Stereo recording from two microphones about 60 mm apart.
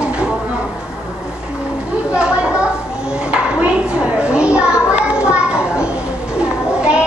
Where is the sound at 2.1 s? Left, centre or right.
Centre.